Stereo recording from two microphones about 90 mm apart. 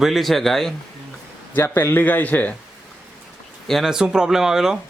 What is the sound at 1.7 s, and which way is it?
Speech, 25° left (ahead or behind).